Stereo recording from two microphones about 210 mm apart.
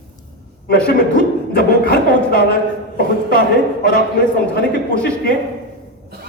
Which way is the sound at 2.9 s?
45° left (ahead or behind).